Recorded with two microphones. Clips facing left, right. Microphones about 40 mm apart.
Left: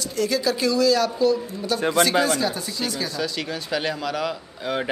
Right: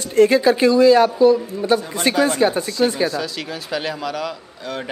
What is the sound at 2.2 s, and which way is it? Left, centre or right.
Speech, right.